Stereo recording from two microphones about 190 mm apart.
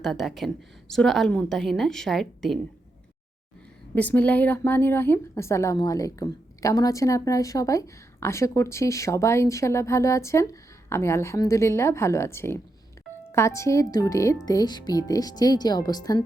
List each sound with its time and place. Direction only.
0.0 s a woman's voice: centre (ahead or behind)
3.9 s a woman's voice: 10° left (ahead or behind)